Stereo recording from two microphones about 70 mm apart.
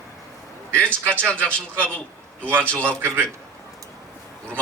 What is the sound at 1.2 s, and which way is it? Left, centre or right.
Speech, right.